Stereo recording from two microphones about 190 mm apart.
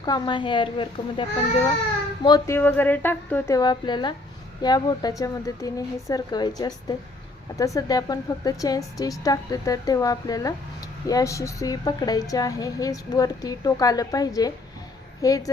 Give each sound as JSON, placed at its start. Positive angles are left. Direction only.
{"t": 0.0, "sound": "a woman's voice", "side_deg": 25}
{"t": 2.2, "sound": "a woman's voice", "side_deg": 20}
{"t": 2.6, "sound": "a woman's voice", "side_deg": 10}